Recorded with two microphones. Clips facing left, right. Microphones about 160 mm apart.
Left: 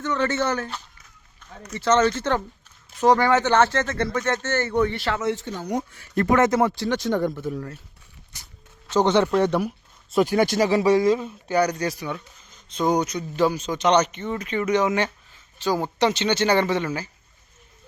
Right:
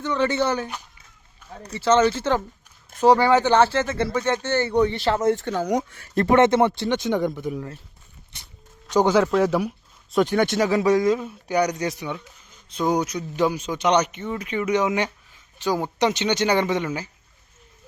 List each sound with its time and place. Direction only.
0.0 s speech: 10° right (ahead or behind)
1.4 s a sound: 10° right (ahead or behind)
1.8 s speech: 10° right (ahead or behind)
4.9 s speech: 30° right (ahead or behind)
5.2 s speech: 50° right (ahead or behind)
5.5 s speech: 90° right
6.1 s speech: 30° right (ahead or behind)
6.6 s speech: centre (ahead or behind)
7.4 s speech: 15° right (ahead or behind)
8.9 s a man's voice: 10° right (ahead or behind)
9.1 s speech: centre (ahead or behind)
11.4 s speech: 15° right (ahead or behind)